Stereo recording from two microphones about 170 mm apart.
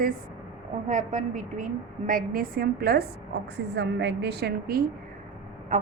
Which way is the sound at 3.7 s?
90° right.